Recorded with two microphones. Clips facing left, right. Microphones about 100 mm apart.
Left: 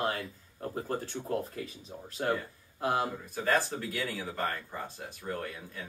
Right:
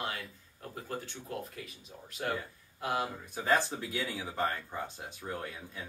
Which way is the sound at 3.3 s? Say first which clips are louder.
Right 1 dB; 15° right (ahead or behind).